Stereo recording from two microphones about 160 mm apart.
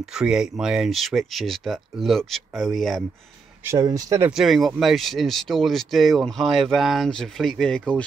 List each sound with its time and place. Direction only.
0.0 s speech: 5° right (ahead or behind)
3.6 s speech: 20° right (ahead or behind)
4.3 s speech: centre (ahead or behind)